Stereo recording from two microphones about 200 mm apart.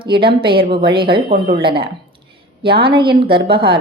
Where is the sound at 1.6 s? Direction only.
25° right (ahead or behind).